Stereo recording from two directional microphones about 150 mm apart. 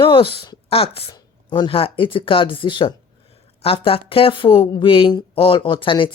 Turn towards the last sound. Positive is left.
turn(degrees=35)  # may be behind; listen again after turning